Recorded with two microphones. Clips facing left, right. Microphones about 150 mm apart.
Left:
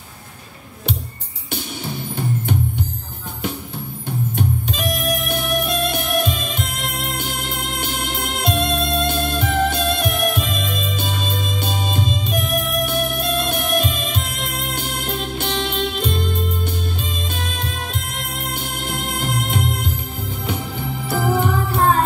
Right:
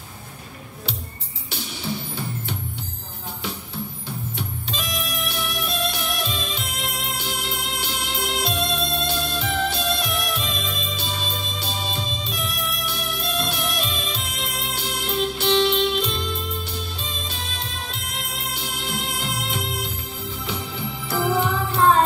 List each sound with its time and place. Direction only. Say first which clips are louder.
4.4 s music: left 8 dB; 50° left (ahead or behind)